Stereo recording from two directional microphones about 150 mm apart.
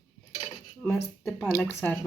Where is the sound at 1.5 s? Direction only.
15° left (ahead or behind).